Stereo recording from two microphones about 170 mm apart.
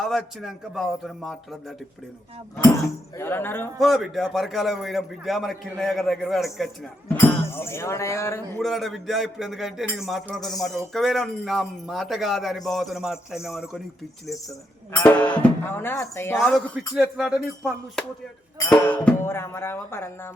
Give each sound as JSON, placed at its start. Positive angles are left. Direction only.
{"t": 0.0, "sound": "speech", "side_deg": 0}
{"t": 3.2, "sound": "speech", "side_deg": 15}
{"t": 3.8, "sound": "speech", "side_deg": 0}
{"t": 7.5, "sound": "speech", "side_deg": 15}
{"t": 8.6, "sound": "speech", "side_deg": 0}
{"t": 14.9, "sound": "speech", "side_deg": 10}
{"t": 16.5, "sound": "speech", "side_deg": 0}